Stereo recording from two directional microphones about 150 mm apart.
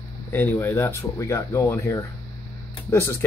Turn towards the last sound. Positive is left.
turn(degrees=15)  # may be behind; listen again after turning